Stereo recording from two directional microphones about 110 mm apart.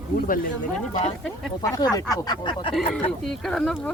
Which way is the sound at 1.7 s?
30° left (ahead or behind).